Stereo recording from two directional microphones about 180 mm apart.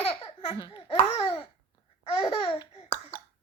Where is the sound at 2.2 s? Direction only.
30° left (ahead or behind).